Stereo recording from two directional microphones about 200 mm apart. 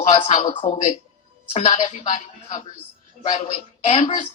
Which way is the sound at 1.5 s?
35° left (ahead or behind).